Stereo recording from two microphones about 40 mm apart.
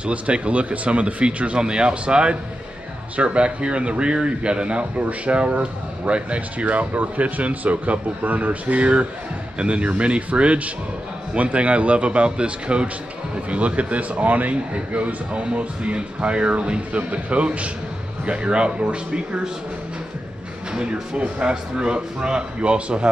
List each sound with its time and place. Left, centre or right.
0.0 s a man's voice: right
14.5 s a man's voice: right
20.7 s speech: right